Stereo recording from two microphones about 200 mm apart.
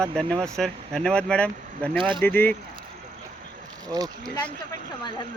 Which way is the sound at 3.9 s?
20° right (ahead or behind).